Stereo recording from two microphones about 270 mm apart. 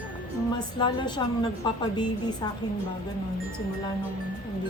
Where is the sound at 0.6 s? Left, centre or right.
Centre.